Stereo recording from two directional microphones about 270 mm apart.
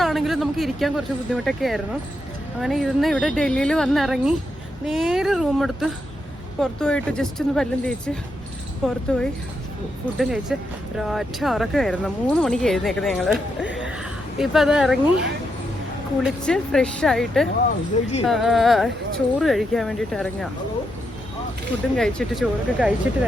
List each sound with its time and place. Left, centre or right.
0.0 s speech: centre
16.2 s speech: centre
17.9 s speech: left
18.3 s speech: centre
21.9 s speech: centre